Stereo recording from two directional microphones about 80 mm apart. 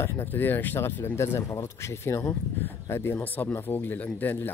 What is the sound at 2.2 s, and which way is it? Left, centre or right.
Speech, centre.